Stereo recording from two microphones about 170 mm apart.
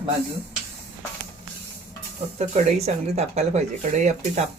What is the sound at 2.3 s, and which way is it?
Speech, 40° right (ahead or behind).